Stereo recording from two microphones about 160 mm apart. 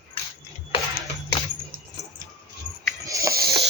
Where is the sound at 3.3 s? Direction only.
70° right (ahead or behind).